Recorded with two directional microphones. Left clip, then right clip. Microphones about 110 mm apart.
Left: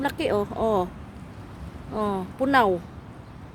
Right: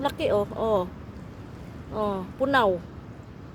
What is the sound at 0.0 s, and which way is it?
Speech, 55° left (ahead or behind).